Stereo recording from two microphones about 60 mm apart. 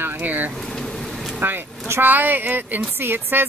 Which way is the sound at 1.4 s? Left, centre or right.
Right.